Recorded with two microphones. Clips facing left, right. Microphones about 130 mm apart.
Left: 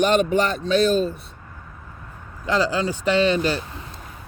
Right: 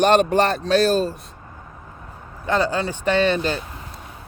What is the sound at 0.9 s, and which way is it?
Speech, 35° right (ahead or behind).